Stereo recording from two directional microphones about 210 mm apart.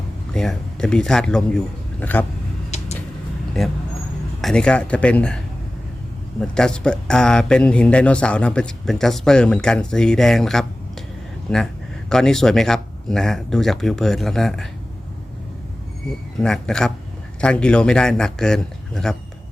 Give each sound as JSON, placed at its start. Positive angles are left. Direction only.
{"t": 0.3, "sound": "a man's voice", "side_deg": 5}
{"t": 2.6, "sound": "a sound", "side_deg": 30}
{"t": 4.4, "sound": "a man's voice", "side_deg": 0}
{"t": 6.4, "sound": "speech", "side_deg": 5}
{"t": 16.4, "sound": "speech", "side_deg": 5}